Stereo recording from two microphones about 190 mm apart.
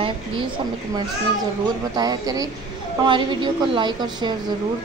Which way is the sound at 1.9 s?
20° right (ahead or behind).